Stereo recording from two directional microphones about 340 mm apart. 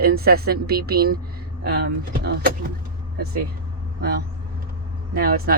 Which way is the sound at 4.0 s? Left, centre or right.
Right.